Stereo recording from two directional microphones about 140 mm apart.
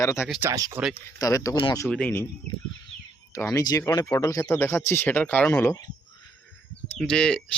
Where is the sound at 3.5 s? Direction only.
25° left (ahead or behind).